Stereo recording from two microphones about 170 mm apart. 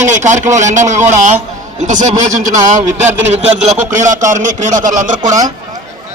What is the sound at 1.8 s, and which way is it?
A man's voice, 45° right (ahead or behind).